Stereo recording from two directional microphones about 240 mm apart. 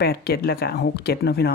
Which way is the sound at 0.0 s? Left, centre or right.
Left.